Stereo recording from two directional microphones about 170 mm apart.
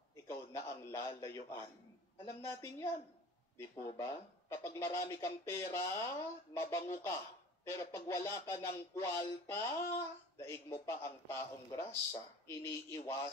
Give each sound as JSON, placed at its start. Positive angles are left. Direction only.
{"t": 0.1, "sound": "speech", "side_deg": 15}